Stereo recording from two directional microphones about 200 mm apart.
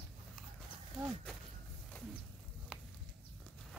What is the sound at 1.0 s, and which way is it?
Speech, centre (ahead or behind).